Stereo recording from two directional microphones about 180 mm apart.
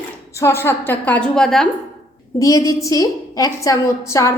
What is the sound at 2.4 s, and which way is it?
A woman's voice, 20° left (ahead or behind).